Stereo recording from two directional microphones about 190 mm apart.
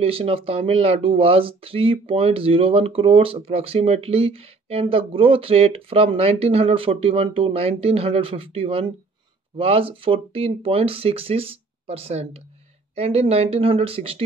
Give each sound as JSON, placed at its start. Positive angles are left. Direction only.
{"t": 0.0, "sound": "speech", "side_deg": -30}